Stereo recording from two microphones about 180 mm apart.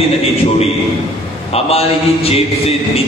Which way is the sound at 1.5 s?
35° left (ahead or behind).